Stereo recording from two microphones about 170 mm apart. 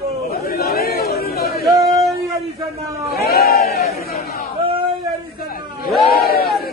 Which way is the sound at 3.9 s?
65° left (ahead or behind).